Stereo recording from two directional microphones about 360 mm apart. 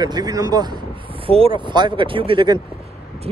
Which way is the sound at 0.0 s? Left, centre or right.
Centre.